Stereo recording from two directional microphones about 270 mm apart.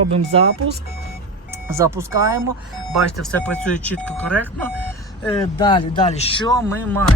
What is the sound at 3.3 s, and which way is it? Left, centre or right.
Speech, centre.